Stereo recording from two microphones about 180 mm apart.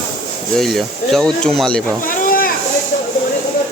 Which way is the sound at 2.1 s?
50° left (ahead or behind).